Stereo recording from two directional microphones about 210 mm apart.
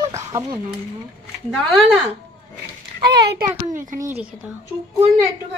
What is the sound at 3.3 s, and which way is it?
Speech, 40° right (ahead or behind).